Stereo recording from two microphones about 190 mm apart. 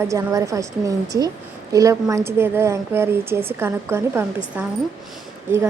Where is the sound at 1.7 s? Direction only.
15° right (ahead or behind).